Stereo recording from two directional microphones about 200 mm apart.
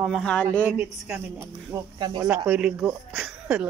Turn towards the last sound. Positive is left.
turn(degrees=-5)  # may be behind; listen again after turning